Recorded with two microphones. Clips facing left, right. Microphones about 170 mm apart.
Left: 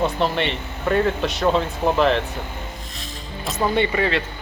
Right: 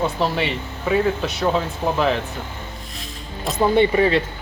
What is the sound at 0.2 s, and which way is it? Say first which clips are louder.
Speech: even; 5° right (ahead or behind).